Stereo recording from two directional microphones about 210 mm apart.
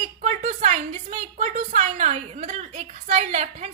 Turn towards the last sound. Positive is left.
turn(degrees=-30)  # may be behind; listen again after turning